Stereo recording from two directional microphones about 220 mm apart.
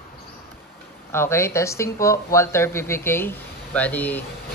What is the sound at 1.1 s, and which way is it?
Speech, 10° left (ahead or behind).